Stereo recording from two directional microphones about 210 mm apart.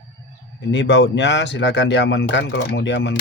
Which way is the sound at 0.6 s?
55° left (ahead or behind).